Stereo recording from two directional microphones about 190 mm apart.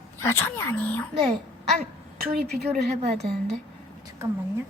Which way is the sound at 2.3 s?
55° right (ahead or behind).